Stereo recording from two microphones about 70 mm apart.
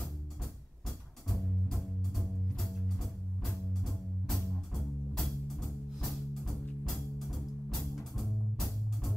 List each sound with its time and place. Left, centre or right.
1.3 s music: centre
3.4 s music: centre